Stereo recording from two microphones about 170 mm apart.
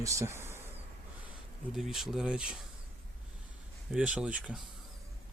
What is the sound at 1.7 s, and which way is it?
Speech, centre (ahead or behind).